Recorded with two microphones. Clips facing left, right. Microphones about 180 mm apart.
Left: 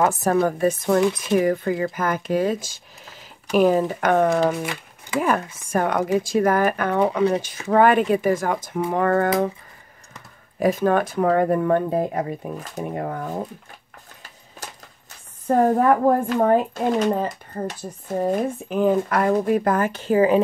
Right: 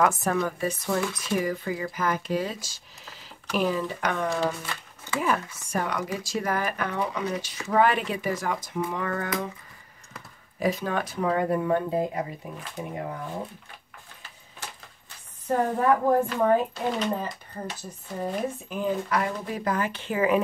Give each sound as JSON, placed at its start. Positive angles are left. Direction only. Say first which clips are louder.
{"t": 0.0, "sound": "speech", "louder": "left 5 dB", "side_deg": 35}
{"t": 10.6, "sound": "speech", "louder": "left 8 dB", "side_deg": 50}
{"t": 15.4, "sound": "speech", "louder": "left 6 dB", "side_deg": 55}